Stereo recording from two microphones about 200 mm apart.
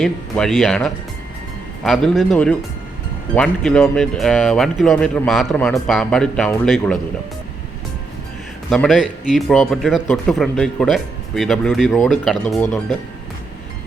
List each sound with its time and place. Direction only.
0.0 s speech: centre (ahead or behind)
8.7 s speech: centre (ahead or behind)